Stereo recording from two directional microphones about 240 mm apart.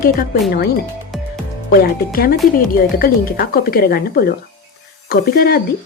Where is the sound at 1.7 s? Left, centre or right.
Left.